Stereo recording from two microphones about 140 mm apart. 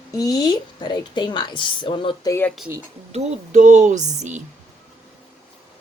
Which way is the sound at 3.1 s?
60° right (ahead or behind).